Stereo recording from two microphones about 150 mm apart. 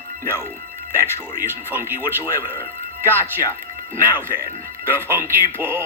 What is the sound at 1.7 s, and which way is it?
Speech, 15° right (ahead or behind).